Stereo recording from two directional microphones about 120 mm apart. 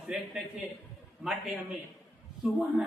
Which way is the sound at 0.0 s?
Centre (ahead or behind).